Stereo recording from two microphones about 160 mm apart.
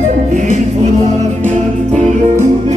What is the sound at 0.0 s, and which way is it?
Music, 50° right (ahead or behind).